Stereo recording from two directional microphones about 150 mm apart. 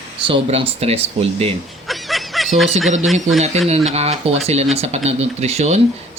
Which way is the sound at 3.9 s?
45° right (ahead or behind).